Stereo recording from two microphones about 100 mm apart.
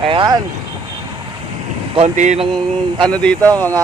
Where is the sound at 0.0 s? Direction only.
60° right (ahead or behind).